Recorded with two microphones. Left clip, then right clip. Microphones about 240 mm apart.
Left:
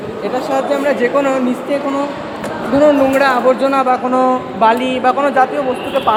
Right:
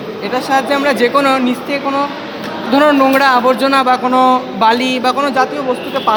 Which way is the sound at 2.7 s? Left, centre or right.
Right.